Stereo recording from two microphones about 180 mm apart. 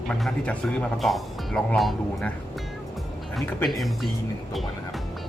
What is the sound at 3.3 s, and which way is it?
Speech, centre (ahead or behind).